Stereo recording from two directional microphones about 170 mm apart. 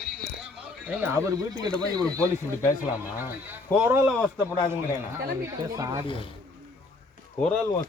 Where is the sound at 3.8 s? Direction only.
10° right (ahead or behind).